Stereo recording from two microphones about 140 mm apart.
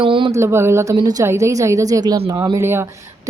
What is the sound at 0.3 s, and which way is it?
Speech, 20° right (ahead or behind).